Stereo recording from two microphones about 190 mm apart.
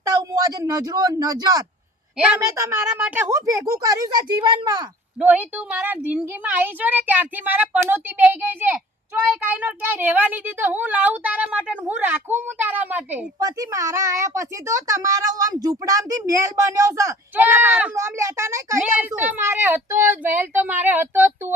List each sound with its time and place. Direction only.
0.2 s speech: 20° right (ahead or behind)
2.1 s a woman's voice: 5° right (ahead or behind); by 4.9 s 20° right (ahead or behind)
5.2 s a woman's voice: 10° right (ahead or behind)